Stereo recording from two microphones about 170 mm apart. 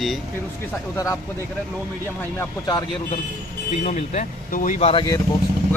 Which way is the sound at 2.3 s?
20° left (ahead or behind).